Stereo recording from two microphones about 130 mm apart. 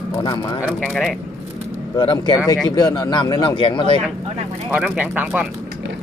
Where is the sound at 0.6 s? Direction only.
5° right (ahead or behind).